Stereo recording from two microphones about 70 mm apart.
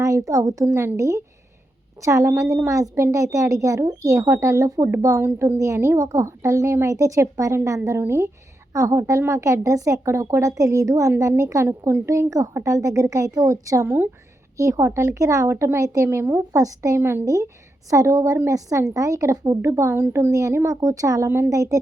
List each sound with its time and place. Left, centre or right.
0.0 s speech: right
13.8 s speech: right
14.5 s speech: right
16.0 s speech: right
16.5 s speech: right
17.0 s speech: right
17.2 s speech: right
20.7 s speech: right
21.2 s speech: right